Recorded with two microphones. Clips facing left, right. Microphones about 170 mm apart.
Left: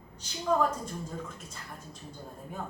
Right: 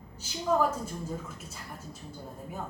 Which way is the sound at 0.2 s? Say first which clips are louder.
Right 1 dB; 5° right (ahead or behind).